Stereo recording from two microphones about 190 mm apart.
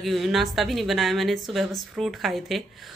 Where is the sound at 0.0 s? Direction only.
Centre (ahead or behind).